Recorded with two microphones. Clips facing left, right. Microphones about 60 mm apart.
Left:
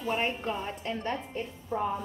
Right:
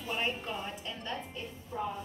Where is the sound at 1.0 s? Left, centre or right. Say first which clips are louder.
Left 6 dB; left.